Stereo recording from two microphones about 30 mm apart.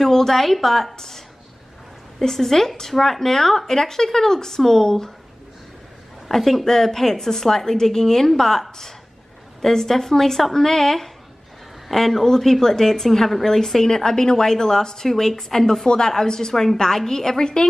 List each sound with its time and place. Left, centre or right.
0.0 s speech: centre
0.9 s a sound: centre
2.1 s speech: centre
6.2 s a woman's voice: centre; by 17.6 s left